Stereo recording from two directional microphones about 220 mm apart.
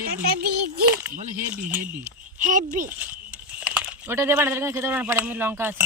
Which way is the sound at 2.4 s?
35° right (ahead or behind).